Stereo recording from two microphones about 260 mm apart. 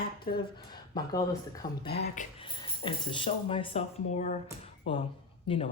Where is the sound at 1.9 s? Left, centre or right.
Left.